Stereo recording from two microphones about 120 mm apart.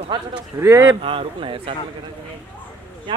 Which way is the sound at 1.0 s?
50° right (ahead or behind).